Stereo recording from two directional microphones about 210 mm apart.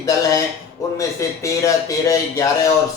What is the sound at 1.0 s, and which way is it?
A man's voice, 15° left (ahead or behind).